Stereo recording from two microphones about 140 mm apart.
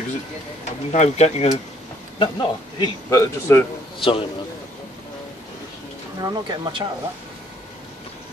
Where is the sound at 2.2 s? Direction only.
30° left (ahead or behind).